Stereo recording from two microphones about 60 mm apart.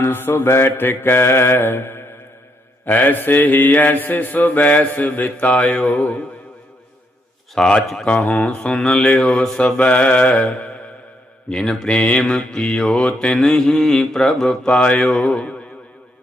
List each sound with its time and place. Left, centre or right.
0.0 s mantra: left
5.5 s speech: left
7.5 s mantra: centre
10.4 s music: centre
11.4 s mantra: centre
14.9 s speech: centre
15.2 s speech: centre